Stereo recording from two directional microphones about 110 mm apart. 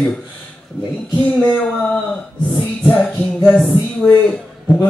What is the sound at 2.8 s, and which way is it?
Speech, 10° left (ahead or behind).